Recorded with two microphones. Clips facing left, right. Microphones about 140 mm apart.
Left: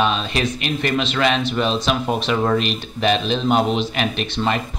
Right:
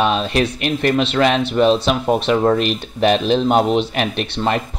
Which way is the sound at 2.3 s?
30° right (ahead or behind).